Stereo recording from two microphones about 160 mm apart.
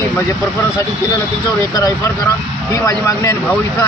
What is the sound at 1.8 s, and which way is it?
Speech, 25° left (ahead or behind).